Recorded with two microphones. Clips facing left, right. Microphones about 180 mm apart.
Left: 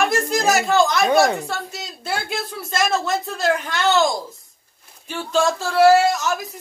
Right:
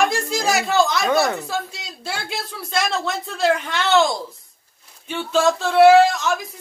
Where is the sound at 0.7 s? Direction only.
Centre (ahead or behind).